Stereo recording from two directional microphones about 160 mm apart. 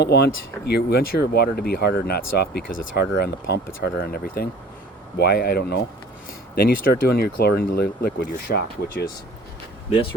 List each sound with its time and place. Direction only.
0.0 s speech: 90° left
3.2 s speech: 75° left (ahead or behind)
5.1 s speech: 85° left
6.6 s speech: 70° left (ahead or behind); by 9.0 s 85° left